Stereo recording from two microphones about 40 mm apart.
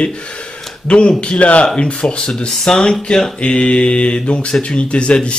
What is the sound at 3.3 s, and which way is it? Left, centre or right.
Speech, left.